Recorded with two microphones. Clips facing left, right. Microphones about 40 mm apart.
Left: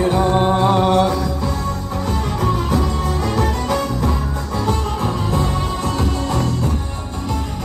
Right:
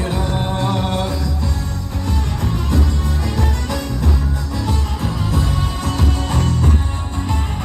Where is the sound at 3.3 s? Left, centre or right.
Left.